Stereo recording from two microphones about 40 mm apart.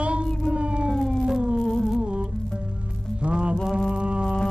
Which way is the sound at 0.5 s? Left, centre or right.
Right.